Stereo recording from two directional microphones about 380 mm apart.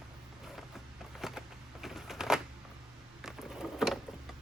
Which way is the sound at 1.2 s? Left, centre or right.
Centre.